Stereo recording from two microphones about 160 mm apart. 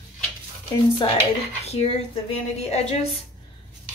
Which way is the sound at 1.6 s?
40° left (ahead or behind).